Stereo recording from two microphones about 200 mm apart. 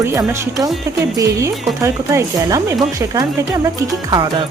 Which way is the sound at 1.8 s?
15° right (ahead or behind).